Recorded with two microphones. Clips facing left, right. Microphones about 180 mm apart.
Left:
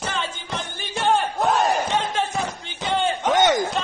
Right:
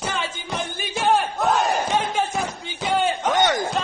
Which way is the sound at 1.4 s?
Centre (ahead or behind).